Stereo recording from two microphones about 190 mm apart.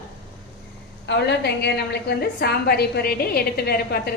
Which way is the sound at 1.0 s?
65° left (ahead or behind).